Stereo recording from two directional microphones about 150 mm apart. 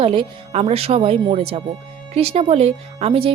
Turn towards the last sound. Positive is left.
turn(degrees=-35)  # may be behind; listen again after turning